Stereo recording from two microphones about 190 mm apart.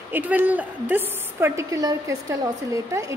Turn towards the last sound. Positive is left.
turn(degrees=-15)  # may be behind; listen again after turning